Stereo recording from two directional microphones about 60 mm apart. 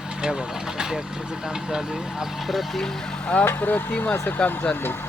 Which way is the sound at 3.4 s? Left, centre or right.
Left.